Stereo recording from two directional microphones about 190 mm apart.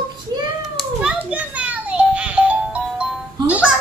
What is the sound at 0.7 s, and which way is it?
Music, 5° right (ahead or behind).